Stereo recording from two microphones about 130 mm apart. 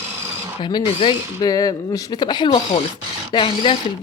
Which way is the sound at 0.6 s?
35° left (ahead or behind).